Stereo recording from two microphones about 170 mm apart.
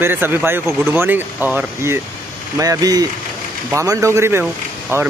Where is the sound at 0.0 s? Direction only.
10° right (ahead or behind).